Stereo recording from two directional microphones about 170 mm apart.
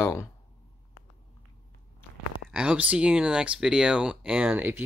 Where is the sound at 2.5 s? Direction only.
5° right (ahead or behind).